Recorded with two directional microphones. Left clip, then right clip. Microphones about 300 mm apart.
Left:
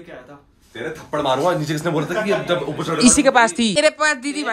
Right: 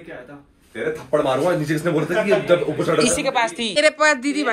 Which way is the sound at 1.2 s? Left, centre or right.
Left.